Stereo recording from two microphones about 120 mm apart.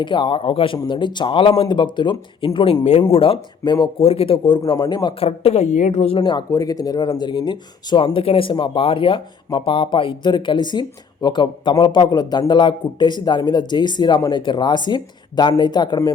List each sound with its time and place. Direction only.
0.0 s speech: 45° left (ahead or behind)
4.0 s speech: 55° left (ahead or behind); by 5.1 s 35° left (ahead or behind)
5.2 s a woman's voice: 55° left (ahead or behind)
6.2 s speech: 35° left (ahead or behind)